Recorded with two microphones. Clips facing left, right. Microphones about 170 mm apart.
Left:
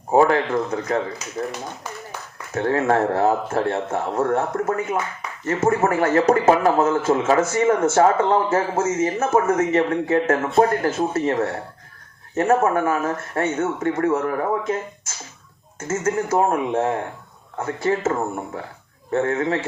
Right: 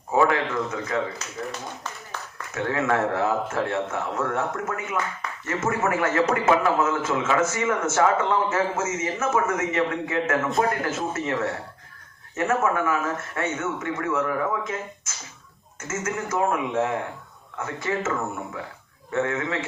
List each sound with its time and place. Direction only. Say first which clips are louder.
0.1 s a man's voice: left 5 dB; 35° left (ahead or behind)
1.2 s speech: left 3 dB; 10° left (ahead or behind)
2.1 s a sound: left 1 dB; 10° left (ahead or behind)
2.5 s a man's voice: left 5 dB; 35° left (ahead or behind)